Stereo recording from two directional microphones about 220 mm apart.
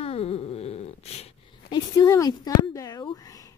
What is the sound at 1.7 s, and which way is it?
A woman's voice, 15° left (ahead or behind).